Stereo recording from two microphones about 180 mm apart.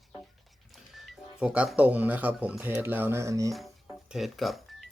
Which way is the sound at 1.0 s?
5° right (ahead or behind).